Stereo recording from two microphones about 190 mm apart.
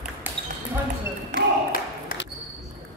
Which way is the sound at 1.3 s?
50° left (ahead or behind).